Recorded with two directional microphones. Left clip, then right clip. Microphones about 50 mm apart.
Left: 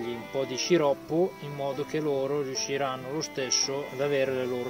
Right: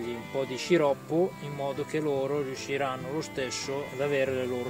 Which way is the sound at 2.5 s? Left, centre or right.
Right.